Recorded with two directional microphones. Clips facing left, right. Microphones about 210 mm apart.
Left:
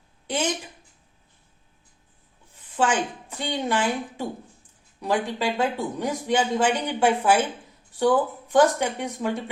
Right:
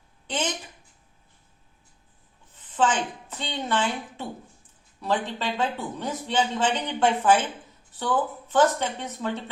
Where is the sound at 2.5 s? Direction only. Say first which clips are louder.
Left 1 dB; 10° left (ahead or behind).